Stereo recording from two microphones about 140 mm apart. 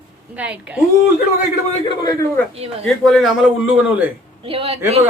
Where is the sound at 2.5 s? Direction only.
45° right (ahead or behind).